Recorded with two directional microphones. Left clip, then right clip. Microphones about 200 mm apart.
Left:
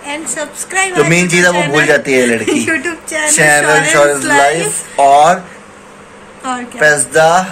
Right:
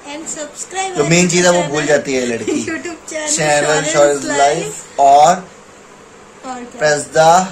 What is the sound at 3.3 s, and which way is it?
Speech, 5° left (ahead or behind).